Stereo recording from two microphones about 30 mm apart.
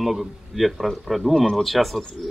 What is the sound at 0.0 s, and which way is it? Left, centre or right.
Speech, centre.